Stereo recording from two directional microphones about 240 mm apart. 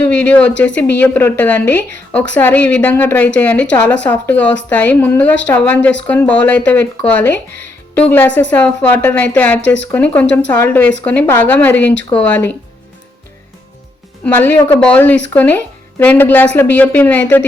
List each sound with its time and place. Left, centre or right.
0.1 s a woman's voice: centre
8.4 s a woman's voice: centre
9.6 s speech: left
10.2 s a woman's voice: centre
14.3 s a woman's voice: centre